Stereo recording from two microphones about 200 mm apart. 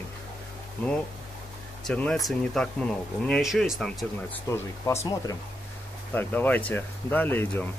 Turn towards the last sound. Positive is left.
turn(degrees=10)  # may be behind; listen again after turning